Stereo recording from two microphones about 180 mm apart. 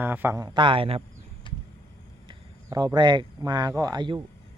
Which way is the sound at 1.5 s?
25° left (ahead or behind).